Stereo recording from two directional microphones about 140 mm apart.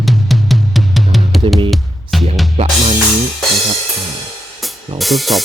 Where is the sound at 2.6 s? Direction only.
50° right (ahead or behind).